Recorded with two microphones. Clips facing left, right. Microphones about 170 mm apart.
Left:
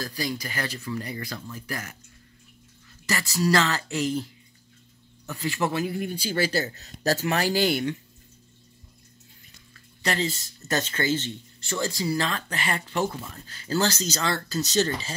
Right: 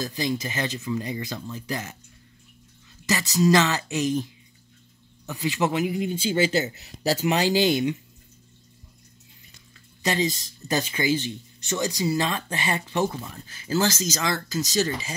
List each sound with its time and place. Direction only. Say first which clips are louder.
0.0 s speech: right 4 dB; 20° right (ahead or behind)
3.1 s speech: right 4 dB; 15° right (ahead or behind)
10.0 s speech: right 3 dB; 15° right (ahead or behind)